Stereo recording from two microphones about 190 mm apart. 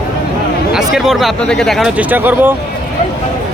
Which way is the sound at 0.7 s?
Centre (ahead or behind).